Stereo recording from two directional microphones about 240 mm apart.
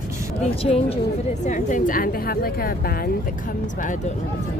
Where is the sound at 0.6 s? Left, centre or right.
Left.